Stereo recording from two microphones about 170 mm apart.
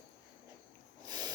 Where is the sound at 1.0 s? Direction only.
25° right (ahead or behind).